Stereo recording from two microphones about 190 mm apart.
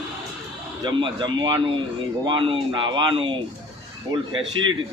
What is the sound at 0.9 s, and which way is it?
Speech, 25° right (ahead or behind).